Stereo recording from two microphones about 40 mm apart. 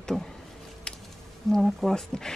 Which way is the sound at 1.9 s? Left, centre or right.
Centre.